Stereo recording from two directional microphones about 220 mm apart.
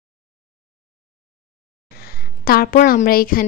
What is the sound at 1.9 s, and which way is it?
A woman's voice, 45° left (ahead or behind).